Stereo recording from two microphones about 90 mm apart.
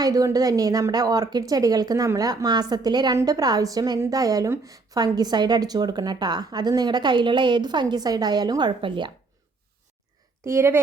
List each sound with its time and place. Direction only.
0.0 s a woman's voice: 45° right (ahead or behind); by 9.1 s 60° right (ahead or behind)
10.4 s speech: 30° right (ahead or behind)